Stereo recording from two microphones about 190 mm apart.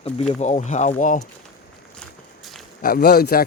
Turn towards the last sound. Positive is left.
turn(degrees=50)  # may be behind; listen again after turning